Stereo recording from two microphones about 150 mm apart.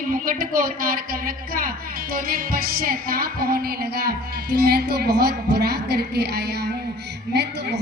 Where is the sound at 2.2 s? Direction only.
80° right.